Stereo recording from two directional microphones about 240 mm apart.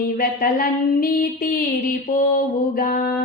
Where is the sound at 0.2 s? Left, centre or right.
Left.